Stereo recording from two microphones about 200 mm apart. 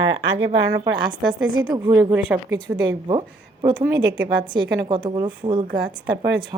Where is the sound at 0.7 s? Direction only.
25° right (ahead or behind).